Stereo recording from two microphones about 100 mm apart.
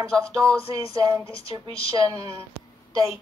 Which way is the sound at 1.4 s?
75° left (ahead or behind).